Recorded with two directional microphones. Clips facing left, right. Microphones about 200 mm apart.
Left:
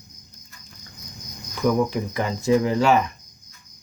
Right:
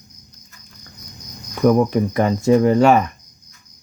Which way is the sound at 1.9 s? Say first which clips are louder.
Right 8 dB; 55° right (ahead or behind).